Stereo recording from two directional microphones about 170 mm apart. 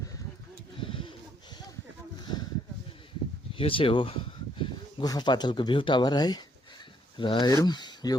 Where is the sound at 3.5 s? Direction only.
30° left (ahead or behind).